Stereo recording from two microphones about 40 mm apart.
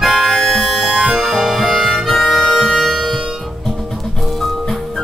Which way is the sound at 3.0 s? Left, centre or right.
Centre.